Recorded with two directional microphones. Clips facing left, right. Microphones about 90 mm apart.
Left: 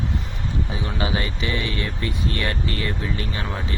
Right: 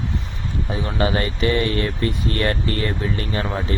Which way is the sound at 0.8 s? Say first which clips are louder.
Right 6 dB; 45° right (ahead or behind).